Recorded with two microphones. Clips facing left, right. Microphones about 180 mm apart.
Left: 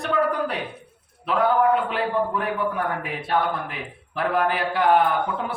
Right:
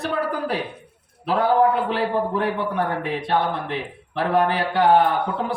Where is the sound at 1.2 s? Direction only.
35° right (ahead or behind).